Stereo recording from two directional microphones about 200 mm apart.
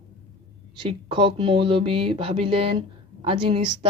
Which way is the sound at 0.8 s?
25° right (ahead or behind).